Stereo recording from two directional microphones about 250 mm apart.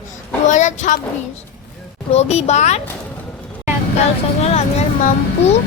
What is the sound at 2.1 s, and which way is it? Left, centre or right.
Speech, left.